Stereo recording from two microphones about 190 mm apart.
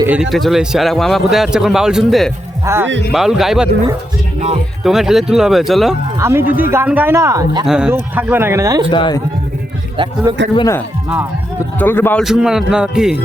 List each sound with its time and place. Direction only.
0.1 s speech: centre (ahead or behind)
2.6 s speech: 15° right (ahead or behind)
3.1 s speech: centre (ahead or behind)
4.4 s speech: 35° right (ahead or behind)
4.8 s speech: centre (ahead or behind)
6.1 s speech: 15° right (ahead or behind)
7.6 s speech: 5° right (ahead or behind)
8.9 s a man's voice: 25° left (ahead or behind)
10.3 s speech: 20° right (ahead or behind)
11.8 s speech: 10° left (ahead or behind)
12.2 s speech: 5° right (ahead or behind)